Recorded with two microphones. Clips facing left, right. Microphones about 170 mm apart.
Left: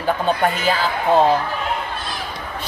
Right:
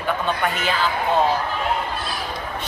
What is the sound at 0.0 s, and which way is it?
Speech, 35° left (ahead or behind).